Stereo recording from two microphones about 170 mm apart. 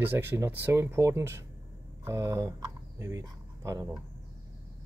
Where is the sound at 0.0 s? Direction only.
10° right (ahead or behind).